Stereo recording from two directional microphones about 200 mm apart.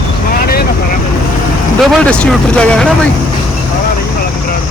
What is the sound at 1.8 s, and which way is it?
Speech, centre (ahead or behind).